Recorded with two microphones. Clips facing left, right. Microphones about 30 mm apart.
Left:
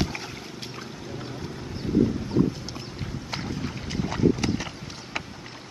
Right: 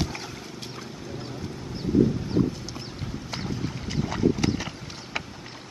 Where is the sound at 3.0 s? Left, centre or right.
Centre.